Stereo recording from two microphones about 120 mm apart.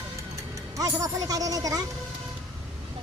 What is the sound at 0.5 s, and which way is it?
Speech, 30° right (ahead or behind).